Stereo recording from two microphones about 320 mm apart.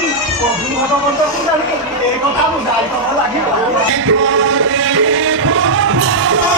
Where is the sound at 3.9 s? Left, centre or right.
Right.